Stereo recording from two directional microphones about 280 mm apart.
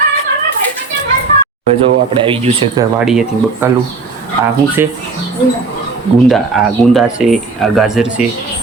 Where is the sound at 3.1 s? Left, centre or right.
Centre.